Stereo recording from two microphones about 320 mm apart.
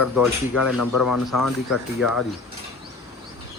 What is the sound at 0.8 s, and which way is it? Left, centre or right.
Speech, left.